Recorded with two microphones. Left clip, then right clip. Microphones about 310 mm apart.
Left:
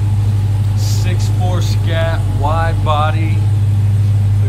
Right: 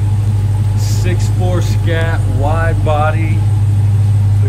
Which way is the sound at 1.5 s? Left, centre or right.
Centre.